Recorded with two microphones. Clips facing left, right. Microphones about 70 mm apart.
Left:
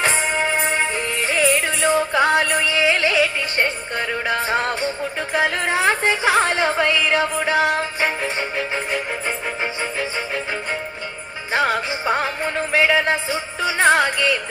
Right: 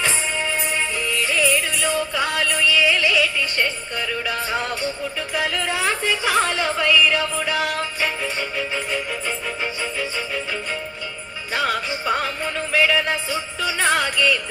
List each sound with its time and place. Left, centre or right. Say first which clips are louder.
0.0 s music: left 4 dB; left
11.5 s music: left 3 dB; left